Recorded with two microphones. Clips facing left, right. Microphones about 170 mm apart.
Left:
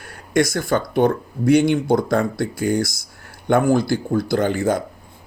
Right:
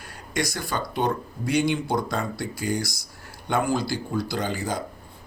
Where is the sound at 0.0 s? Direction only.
55° left (ahead or behind).